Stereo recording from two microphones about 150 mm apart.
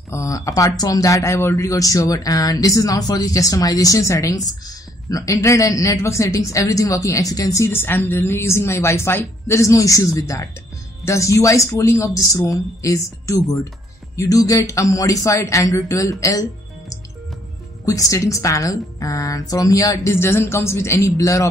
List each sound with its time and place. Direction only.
0.1 s speech: 20° left (ahead or behind)
17.8 s speech: 20° left (ahead or behind)